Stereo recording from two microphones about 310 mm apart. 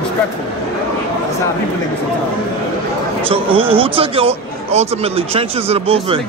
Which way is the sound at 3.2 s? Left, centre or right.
Centre.